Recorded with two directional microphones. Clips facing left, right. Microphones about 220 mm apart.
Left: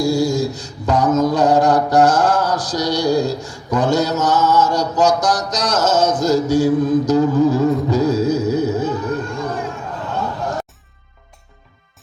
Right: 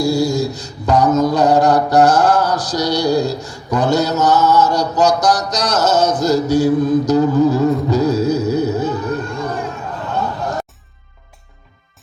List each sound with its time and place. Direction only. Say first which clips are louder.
0.0 s mantra: right 1 dB; 65° right (ahead or behind)